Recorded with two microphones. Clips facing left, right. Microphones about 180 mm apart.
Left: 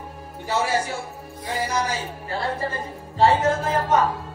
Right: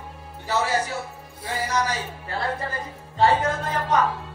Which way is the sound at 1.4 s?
25° left (ahead or behind).